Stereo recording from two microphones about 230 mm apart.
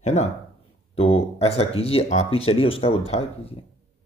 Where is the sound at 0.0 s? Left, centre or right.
Left.